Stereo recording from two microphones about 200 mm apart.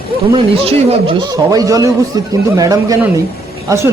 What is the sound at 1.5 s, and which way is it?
Speech, 15° right (ahead or behind).